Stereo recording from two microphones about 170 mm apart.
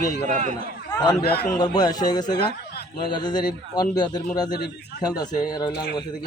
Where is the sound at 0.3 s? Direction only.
45° right (ahead or behind).